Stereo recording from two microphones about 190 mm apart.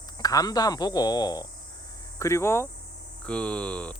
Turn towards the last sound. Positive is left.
turn(degrees=5)  # may be behind; listen again after turning